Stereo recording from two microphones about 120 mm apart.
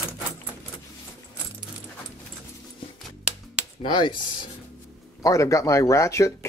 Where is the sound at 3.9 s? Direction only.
40° left (ahead or behind).